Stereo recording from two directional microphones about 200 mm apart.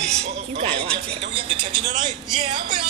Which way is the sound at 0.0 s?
30° right (ahead or behind).